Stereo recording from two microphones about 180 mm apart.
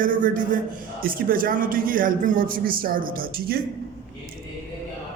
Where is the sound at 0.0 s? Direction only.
50° right (ahead or behind).